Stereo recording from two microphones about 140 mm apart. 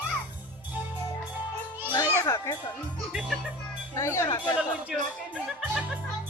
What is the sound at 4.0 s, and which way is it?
Speech, 20° left (ahead or behind).